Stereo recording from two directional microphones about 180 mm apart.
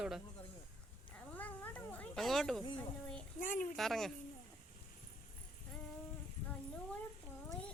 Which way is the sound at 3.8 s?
Centre (ahead or behind).